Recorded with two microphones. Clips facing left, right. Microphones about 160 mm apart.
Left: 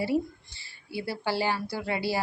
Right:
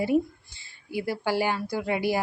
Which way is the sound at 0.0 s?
20° right (ahead or behind).